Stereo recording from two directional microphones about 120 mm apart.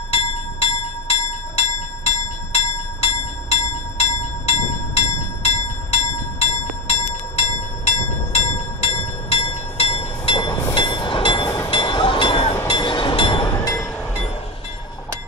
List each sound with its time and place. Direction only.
0.1 s bell: 55° left (ahead or behind)
4.0 s train: 60° left (ahead or behind)